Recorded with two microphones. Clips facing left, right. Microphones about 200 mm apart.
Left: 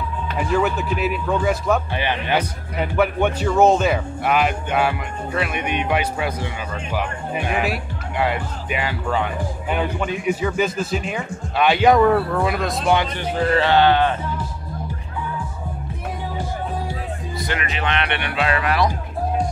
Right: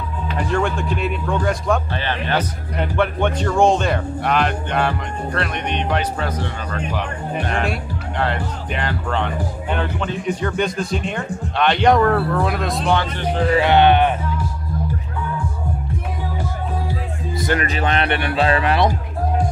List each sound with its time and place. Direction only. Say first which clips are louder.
0.4 s speech: left 1 dB; 5° left (ahead or behind)
12.8 s speech: left 1 dB; 15° left (ahead or behind)
13.5 s speech: right 2 dB; 15° right (ahead or behind)
17.4 s speech: right 6 dB; 40° right (ahead or behind)